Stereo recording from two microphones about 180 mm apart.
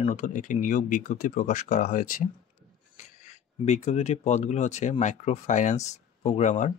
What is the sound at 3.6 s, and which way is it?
Speech, 40° left (ahead or behind).